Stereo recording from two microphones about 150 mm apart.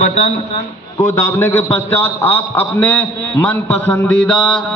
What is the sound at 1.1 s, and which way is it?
A man's voice, 15° left (ahead or behind).